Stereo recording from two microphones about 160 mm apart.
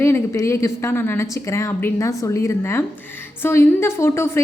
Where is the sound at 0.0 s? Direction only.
15° left (ahead or behind).